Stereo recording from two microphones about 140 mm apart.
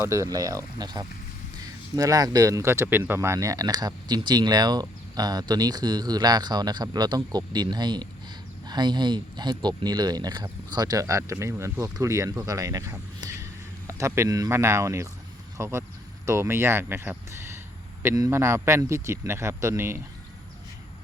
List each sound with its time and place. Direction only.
0.0 s speech: 20° right (ahead or behind)